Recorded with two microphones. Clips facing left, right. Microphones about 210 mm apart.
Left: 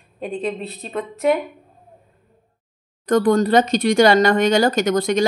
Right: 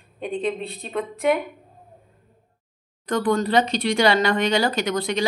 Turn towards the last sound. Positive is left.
turn(degrees=45)  # may be behind; listen again after turning